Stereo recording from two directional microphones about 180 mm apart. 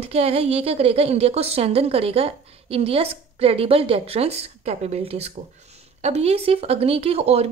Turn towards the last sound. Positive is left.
turn(degrees=-35)  # may be behind; listen again after turning